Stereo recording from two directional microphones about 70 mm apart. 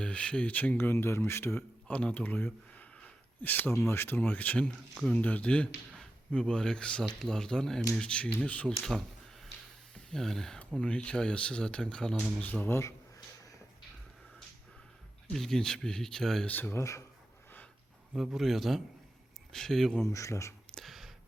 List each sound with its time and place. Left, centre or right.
0.0 s speech: centre; by 1.6 s left
1.9 s speech: centre; by 4.2 s left
4.2 s speech: left
8.6 s speech: centre
12.4 s speech: left
15.3 s speech: centre
16.5 s speech: left
18.3 s a man's voice: centre
20.1 s speech: left
20.7 s whispering: centre